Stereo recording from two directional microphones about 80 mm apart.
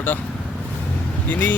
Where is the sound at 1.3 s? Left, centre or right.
Left.